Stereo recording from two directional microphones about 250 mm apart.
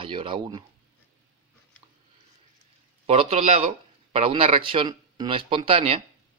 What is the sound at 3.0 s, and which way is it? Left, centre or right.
A man's voice, right.